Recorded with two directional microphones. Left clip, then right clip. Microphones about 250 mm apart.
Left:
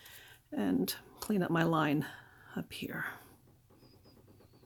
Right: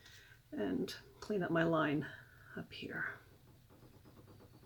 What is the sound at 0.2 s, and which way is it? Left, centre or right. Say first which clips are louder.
Speech: left 3 dB; left.